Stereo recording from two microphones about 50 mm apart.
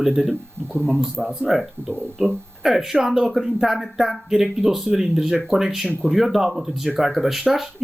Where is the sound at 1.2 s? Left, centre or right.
Centre.